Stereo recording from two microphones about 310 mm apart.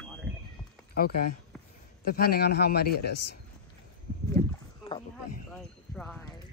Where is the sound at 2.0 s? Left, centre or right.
Left.